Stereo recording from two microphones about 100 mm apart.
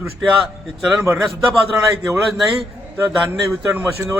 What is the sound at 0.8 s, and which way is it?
Speech, 5° right (ahead or behind).